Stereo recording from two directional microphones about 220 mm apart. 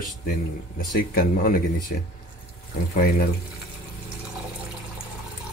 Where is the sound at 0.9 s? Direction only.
40° left (ahead or behind).